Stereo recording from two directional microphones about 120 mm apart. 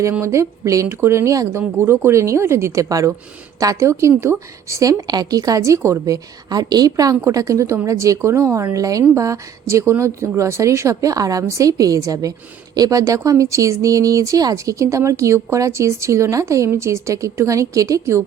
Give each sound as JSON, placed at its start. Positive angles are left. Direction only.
{"t": 0.0, "sound": "speech", "side_deg": -20}